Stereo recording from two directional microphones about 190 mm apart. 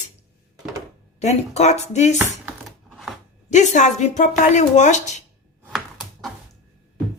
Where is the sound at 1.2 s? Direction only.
35° left (ahead or behind).